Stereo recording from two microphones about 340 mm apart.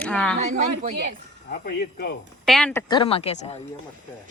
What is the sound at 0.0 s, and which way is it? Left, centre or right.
Speech, centre.